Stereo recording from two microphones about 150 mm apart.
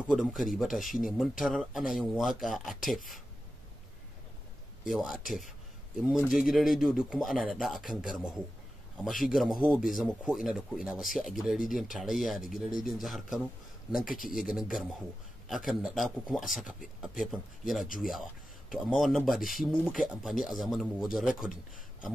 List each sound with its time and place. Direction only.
0.1 s speech: 5° right (ahead or behind)
4.8 s speech: centre (ahead or behind)
14.0 s speech: 65° left (ahead or behind)
14.3 s speech: centre (ahead or behind)